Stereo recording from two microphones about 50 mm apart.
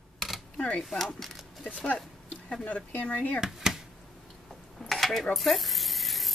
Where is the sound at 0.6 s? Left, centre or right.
Left.